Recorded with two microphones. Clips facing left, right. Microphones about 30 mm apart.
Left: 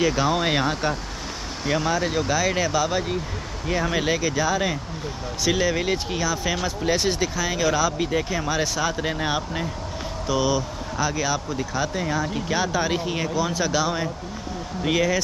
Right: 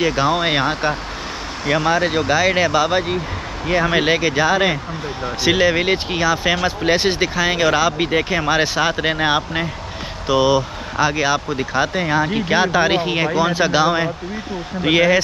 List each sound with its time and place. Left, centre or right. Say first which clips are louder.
0.0 s speech: right 4 dB; right